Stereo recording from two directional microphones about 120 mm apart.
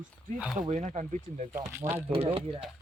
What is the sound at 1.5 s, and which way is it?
Speech, 20° right (ahead or behind).